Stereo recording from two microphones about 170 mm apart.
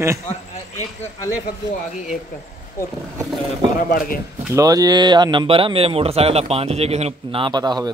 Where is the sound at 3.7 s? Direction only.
55° left (ahead or behind).